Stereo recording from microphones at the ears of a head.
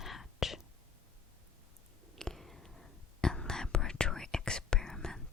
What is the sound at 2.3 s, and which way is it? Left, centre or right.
Whispering, centre.